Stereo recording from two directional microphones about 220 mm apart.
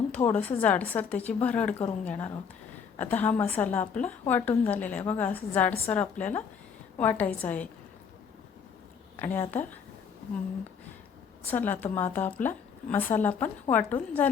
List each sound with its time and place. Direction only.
0.1 s a woman's voice: 10° left (ahead or behind)
9.1 s a woman's voice: 10° left (ahead or behind)
11.4 s a woman's voice: 10° left (ahead or behind)